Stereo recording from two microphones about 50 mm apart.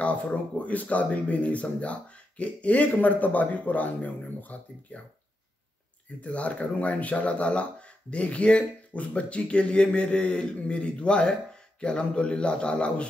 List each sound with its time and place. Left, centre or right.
0.0 s speech: left
6.2 s speech: left